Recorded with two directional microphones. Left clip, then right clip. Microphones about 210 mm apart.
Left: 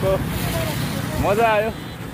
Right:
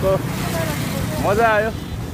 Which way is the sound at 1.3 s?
20° left (ahead or behind).